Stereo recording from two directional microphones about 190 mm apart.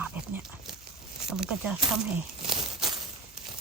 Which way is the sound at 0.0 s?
5° right (ahead or behind).